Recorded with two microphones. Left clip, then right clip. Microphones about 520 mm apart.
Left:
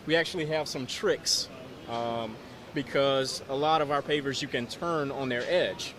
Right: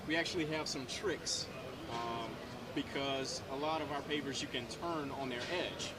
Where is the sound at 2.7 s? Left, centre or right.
Left.